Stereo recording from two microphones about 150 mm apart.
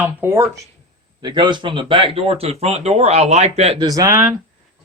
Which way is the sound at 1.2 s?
30° right (ahead or behind).